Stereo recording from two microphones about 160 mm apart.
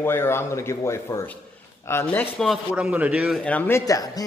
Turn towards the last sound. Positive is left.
turn(degrees=20)  # may be behind; listen again after turning